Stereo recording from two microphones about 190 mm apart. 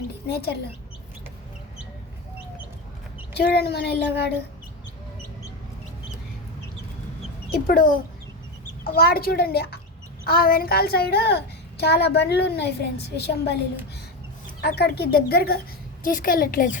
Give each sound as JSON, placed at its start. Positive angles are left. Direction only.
{"t": 0.3, "sound": "a woman's voice", "side_deg": 55}
{"t": 3.3, "sound": "a woman's voice", "side_deg": 60}
{"t": 7.5, "sound": "a woman's voice", "side_deg": 50}
{"t": 14.6, "sound": "a woman's voice", "side_deg": 60}